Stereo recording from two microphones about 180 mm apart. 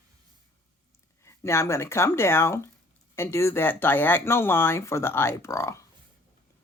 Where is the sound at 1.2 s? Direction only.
15° left (ahead or behind).